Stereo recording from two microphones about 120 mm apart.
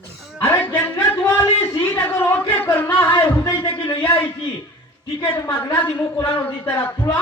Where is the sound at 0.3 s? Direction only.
20° left (ahead or behind).